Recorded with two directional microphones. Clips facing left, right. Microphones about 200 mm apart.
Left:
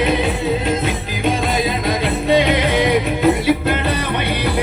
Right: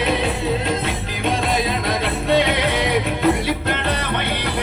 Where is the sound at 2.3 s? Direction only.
Centre (ahead or behind).